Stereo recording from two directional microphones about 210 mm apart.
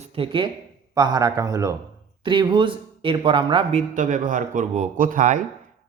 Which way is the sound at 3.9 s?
40° right (ahead or behind).